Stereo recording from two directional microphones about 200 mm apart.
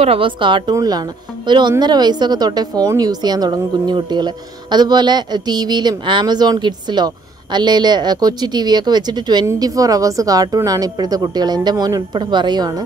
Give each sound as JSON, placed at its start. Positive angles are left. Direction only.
{"t": 0.0, "sound": "a woman's voice", "side_deg": -25}